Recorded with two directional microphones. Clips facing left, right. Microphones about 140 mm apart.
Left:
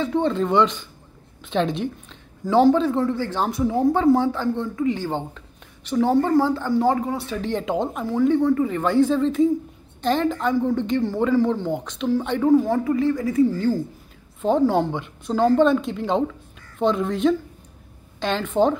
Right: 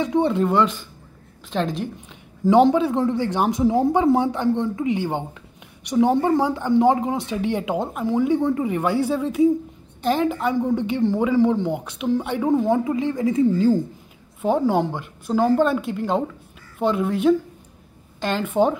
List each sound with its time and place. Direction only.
0.0 s a woman's voice: 15° right (ahead or behind)
2.5 s a woman's voice: 15° right (ahead or behind)
7.3 s a woman's voice: 10° right (ahead or behind)
12.4 s speech: 20° right (ahead or behind)
14.4 s a woman's voice: 10° right (ahead or behind)